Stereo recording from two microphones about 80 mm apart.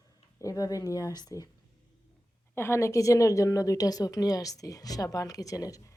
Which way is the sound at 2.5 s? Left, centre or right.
Left.